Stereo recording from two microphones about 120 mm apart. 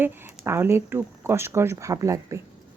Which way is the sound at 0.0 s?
20° right (ahead or behind).